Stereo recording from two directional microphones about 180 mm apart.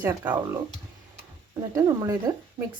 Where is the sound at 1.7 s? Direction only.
20° right (ahead or behind).